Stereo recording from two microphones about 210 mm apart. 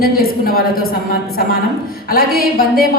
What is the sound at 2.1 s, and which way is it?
Speech, 45° left (ahead or behind).